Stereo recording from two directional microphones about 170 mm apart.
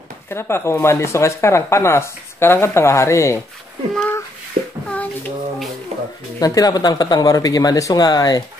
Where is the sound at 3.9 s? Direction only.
10° left (ahead or behind).